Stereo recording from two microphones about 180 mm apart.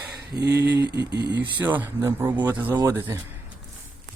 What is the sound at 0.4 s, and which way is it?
Speech, 15° right (ahead or behind).